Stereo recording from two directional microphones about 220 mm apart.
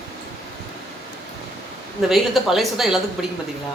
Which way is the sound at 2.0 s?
Centre (ahead or behind).